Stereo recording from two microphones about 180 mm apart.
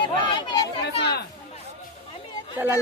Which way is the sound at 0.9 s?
65° left (ahead or behind).